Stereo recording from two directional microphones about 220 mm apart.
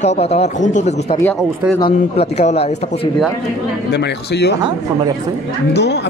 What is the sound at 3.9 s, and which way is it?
Speech, 50° left (ahead or behind).